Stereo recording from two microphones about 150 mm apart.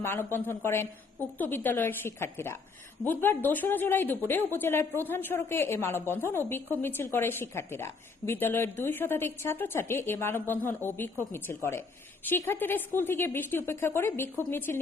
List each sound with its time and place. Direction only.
0.0 s a woman's voice: 15° left (ahead or behind)